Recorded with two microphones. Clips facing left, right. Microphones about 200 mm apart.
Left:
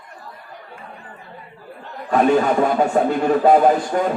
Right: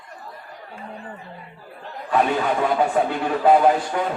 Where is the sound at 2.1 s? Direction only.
45° left (ahead or behind).